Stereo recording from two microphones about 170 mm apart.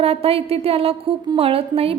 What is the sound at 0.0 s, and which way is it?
A woman's voice, 35° right (ahead or behind).